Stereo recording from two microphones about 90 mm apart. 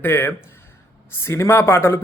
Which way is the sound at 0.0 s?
25° left (ahead or behind).